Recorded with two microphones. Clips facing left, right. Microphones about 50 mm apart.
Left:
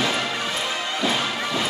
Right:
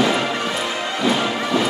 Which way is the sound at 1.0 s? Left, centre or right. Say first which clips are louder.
Right 5 dB; right.